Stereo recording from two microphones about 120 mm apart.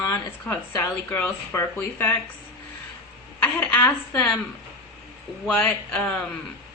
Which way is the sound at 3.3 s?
15° left (ahead or behind).